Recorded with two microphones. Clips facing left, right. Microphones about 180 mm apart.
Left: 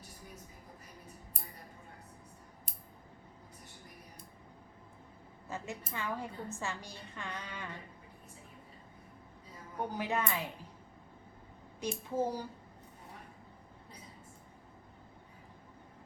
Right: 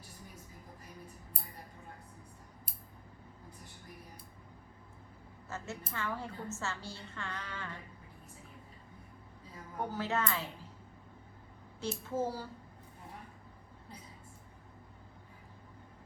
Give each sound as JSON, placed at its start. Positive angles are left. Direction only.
{"t": 5.5, "sound": "a woman's voice", "side_deg": 15}
{"t": 9.9, "sound": "a woman's voice", "side_deg": 15}
{"t": 11.8, "sound": "a woman's voice", "side_deg": 15}